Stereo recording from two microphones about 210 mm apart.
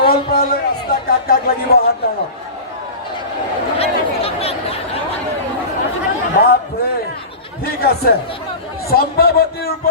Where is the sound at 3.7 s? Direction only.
30° left (ahead or behind).